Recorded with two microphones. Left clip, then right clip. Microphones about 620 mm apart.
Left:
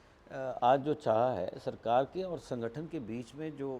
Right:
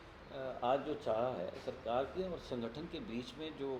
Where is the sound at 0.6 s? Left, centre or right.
Left.